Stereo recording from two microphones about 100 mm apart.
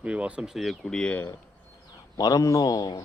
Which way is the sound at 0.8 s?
10° left (ahead or behind).